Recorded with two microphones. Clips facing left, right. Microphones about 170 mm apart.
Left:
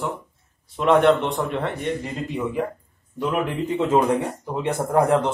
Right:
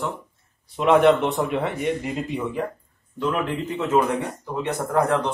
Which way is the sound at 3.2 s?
15° left (ahead or behind).